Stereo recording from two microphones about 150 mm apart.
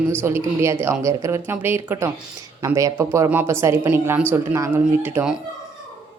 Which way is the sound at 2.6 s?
20° right (ahead or behind).